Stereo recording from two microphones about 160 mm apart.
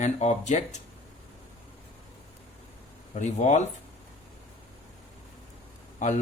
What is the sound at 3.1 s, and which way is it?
Speech, 50° left (ahead or behind).